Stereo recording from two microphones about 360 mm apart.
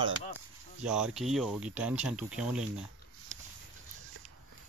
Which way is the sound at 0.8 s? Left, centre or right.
Centre.